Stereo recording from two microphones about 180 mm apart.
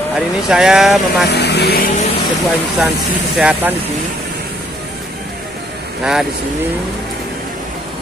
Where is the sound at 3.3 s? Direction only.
5° right (ahead or behind).